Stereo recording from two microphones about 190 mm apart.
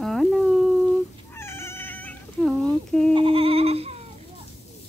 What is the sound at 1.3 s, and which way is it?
Cat, 15° left (ahead or behind).